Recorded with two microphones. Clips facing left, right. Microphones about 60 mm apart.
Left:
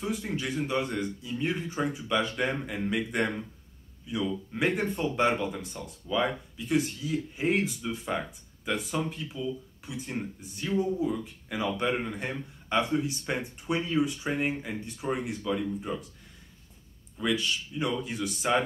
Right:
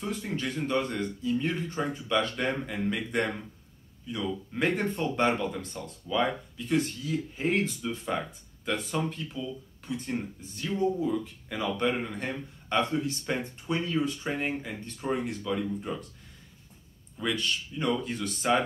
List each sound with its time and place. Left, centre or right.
0.0 s speech: centre
17.2 s speech: centre